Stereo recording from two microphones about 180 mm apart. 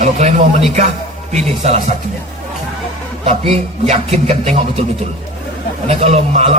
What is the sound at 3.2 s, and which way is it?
A man's voice, 35° right (ahead or behind).